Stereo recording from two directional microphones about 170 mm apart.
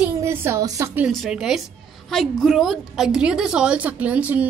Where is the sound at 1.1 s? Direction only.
Centre (ahead or behind).